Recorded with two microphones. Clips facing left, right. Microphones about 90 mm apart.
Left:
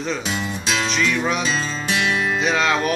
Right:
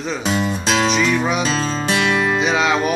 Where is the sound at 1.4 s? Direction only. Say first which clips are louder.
Right 4 dB; 40° right (ahead or behind).